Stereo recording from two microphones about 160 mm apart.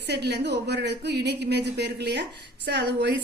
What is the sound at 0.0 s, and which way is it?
A woman's voice, 90° right.